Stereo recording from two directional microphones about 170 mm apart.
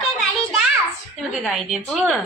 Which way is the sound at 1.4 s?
Centre (ahead or behind).